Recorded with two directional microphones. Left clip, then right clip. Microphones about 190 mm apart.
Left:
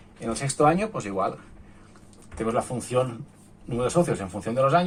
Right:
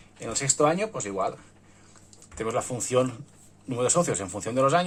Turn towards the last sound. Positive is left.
turn(degrees=-40)  # may be behind; listen again after turning